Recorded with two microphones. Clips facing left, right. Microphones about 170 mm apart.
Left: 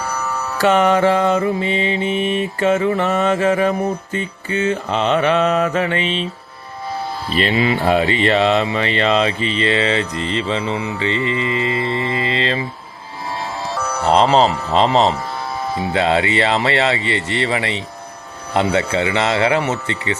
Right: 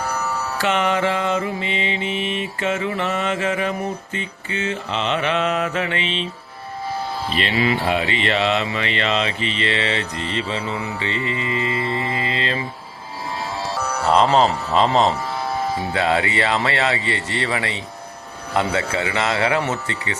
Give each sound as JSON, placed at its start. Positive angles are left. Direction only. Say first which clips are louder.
{"t": 0.6, "sound": "mantra", "louder": "left 7 dB", "side_deg": 40}
{"t": 7.5, "sound": "speech", "louder": "left 1 dB", "side_deg": 25}
{"t": 7.9, "sound": "mantra", "louder": "left 6 dB", "side_deg": 40}
{"t": 14.1, "sound": "speech", "louder": "left 2 dB", "side_deg": 30}